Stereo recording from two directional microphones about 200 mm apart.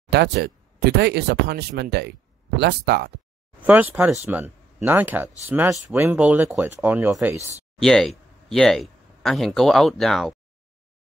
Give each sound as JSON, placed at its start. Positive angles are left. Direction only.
{"t": 0.1, "sound": "speech", "side_deg": -55}
{"t": 3.6, "sound": "speech", "side_deg": -10}
{"t": 7.8, "sound": "speech", "side_deg": 0}